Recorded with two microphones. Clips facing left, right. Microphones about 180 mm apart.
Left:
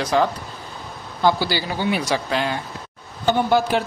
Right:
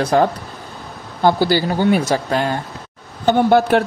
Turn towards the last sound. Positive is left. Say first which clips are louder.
# right 5 dB
turn(degrees=-55)  # may be behind; listen again after turning